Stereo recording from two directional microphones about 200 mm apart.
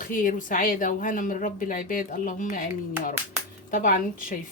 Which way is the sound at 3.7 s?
45° left (ahead or behind).